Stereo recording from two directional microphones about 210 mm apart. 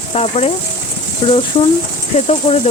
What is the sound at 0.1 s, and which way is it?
Speech, 30° left (ahead or behind).